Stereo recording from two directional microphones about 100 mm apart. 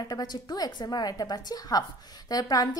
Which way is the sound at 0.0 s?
40° left (ahead or behind).